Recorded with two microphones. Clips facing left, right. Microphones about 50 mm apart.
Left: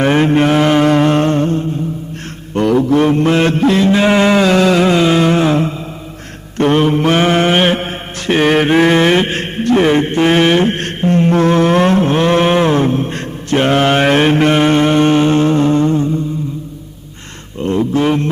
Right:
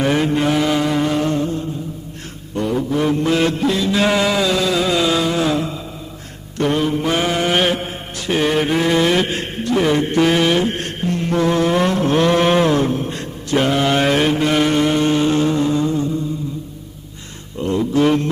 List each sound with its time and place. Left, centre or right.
0.0 s mantra: left
2.6 s mantra: left
3.1 s mantra: left
3.9 s a sound: left
6.6 s mantra: left
14.5 s music: left
17.6 s a sound: left